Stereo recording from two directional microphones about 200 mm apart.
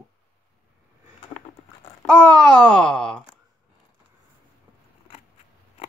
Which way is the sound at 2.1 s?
5° left (ahead or behind).